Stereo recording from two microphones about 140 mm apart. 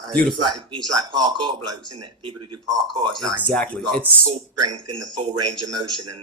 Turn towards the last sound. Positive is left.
turn(degrees=-35)  # may be behind; listen again after turning